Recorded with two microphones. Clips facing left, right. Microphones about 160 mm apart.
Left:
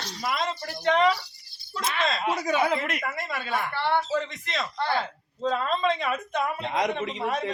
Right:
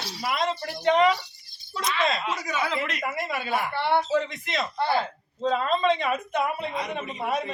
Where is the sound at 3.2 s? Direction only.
10° right (ahead or behind).